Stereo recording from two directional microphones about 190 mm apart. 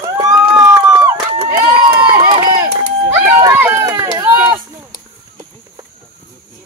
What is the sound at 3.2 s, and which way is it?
Run, 15° right (ahead or behind).